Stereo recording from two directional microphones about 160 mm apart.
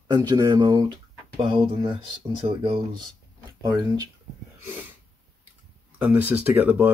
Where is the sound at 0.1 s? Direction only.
25° right (ahead or behind).